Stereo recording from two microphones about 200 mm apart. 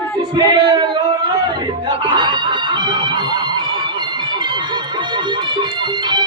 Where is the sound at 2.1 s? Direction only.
20° right (ahead or behind).